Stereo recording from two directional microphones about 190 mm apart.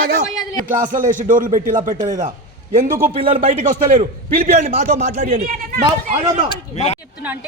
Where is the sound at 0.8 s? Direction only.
45° right (ahead or behind).